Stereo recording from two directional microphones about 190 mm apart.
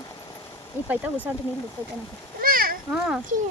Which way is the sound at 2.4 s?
50° right (ahead or behind).